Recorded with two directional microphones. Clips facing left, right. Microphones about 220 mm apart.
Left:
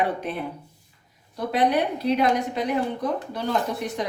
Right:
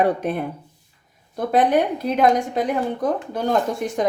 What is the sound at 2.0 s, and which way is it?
Speech, 50° right (ahead or behind).